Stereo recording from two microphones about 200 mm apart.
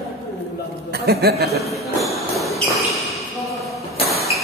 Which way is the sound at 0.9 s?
55° right (ahead or behind).